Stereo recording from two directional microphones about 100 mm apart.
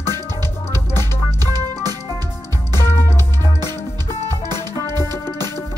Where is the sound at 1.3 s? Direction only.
40° right (ahead or behind).